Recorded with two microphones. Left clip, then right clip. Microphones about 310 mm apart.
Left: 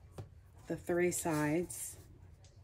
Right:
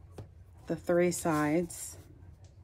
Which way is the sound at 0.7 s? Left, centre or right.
Centre.